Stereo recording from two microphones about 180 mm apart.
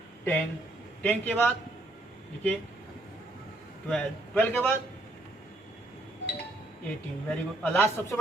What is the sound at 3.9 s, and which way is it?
Speech, 5° left (ahead or behind).